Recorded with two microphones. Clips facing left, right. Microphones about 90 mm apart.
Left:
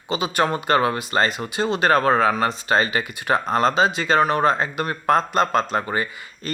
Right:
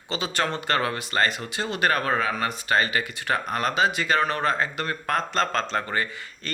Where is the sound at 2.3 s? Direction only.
25° left (ahead or behind).